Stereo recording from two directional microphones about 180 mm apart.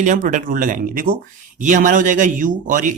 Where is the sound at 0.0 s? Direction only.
45° right (ahead or behind).